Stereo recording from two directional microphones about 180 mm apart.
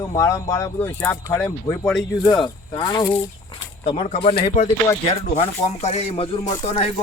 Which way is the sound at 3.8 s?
35° left (ahead or behind).